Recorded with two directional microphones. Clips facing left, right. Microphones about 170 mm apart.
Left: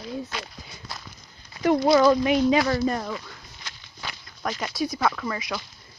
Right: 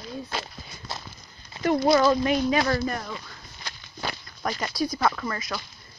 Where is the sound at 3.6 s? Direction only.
40° right (ahead or behind).